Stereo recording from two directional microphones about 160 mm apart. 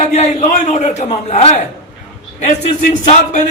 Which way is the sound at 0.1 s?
45° left (ahead or behind).